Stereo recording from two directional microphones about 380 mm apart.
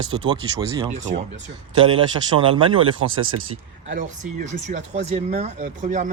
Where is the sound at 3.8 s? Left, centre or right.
Centre.